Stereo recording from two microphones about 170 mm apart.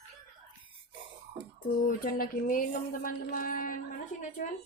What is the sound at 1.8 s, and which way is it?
Speech, 55° left (ahead or behind).